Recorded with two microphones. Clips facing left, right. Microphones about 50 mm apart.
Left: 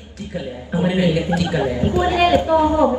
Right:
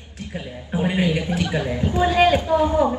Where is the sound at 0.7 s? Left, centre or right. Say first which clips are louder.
Left 3 dB; right.